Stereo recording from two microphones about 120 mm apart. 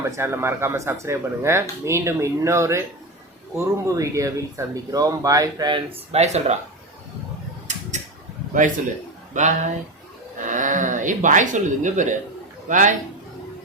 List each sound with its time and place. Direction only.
0.0 s speech: 25° right (ahead or behind)
6.1 s speech: 65° right (ahead or behind)
7.7 s a sound: 80° right
9.3 s speech: 90° right